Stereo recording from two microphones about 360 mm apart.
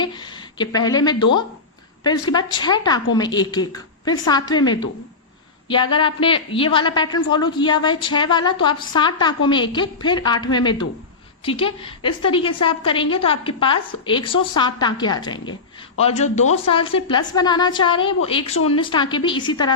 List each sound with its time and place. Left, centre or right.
0.0 s a woman's voice: centre